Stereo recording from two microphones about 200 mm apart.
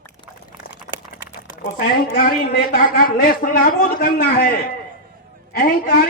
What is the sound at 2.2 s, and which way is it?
A woman's voice, 50° left (ahead or behind).